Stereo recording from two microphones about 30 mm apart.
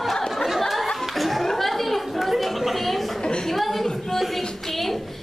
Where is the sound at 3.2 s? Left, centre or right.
Left.